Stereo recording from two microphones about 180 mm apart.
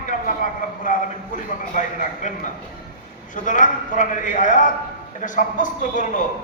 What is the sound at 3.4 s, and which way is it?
A man's voice, 45° left (ahead or behind).